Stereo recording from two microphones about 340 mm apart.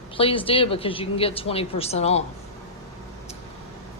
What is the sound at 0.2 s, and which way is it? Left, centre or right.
A woman's voice, centre.